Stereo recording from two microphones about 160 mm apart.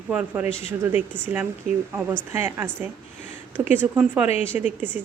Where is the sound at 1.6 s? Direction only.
65° right (ahead or behind).